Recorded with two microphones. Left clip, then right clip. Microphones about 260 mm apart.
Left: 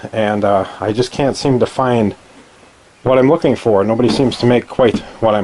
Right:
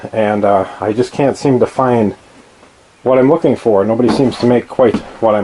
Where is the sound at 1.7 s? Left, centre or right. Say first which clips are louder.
Right 2 dB; centre.